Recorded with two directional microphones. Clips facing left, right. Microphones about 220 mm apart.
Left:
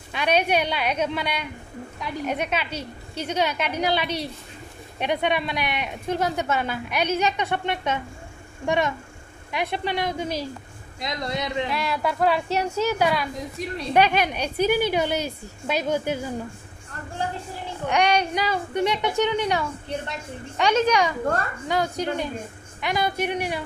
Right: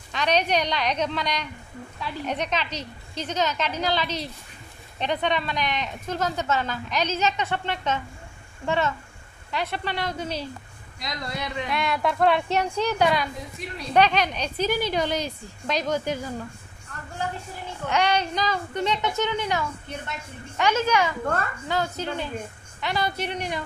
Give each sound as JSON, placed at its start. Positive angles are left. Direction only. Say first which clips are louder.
{"t": 0.1, "sound": "speech", "louder": "left 2 dB", "side_deg": 10}
{"t": 11.0, "sound": "a man's voice", "louder": "left 4 dB", "side_deg": 25}
{"t": 11.7, "sound": "a woman's voice", "louder": "even", "side_deg": 5}
{"t": 17.8, "sound": "speech", "louder": "left 2 dB", "side_deg": 15}